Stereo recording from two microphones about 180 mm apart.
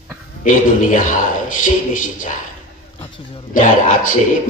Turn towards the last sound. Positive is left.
turn(degrees=45)  # may be behind; listen again after turning